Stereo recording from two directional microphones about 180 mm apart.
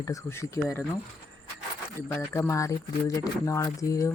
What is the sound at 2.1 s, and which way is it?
Speech, 10° left (ahead or behind).